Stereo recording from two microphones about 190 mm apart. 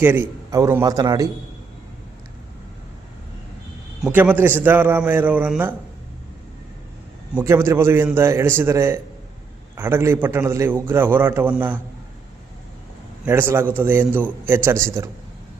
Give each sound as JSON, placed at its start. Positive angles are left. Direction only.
{"t": 0.0, "sound": "a man's voice", "side_deg": -10}
{"t": 4.0, "sound": "a man's voice", "side_deg": -10}
{"t": 7.3, "sound": "a man's voice", "side_deg": -15}
{"t": 13.2, "sound": "a man's voice", "side_deg": -10}